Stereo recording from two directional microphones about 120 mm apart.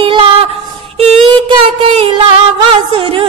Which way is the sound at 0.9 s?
60° right (ahead or behind).